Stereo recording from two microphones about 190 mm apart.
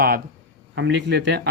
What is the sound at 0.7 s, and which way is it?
Speech, 70° right (ahead or behind).